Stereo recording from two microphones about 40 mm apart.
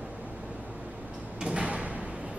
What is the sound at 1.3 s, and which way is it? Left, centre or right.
Door, right.